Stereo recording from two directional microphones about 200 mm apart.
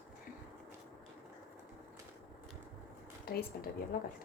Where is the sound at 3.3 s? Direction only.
50° left (ahead or behind).